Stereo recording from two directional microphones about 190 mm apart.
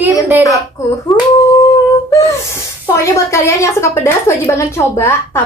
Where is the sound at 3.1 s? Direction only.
15° left (ahead or behind).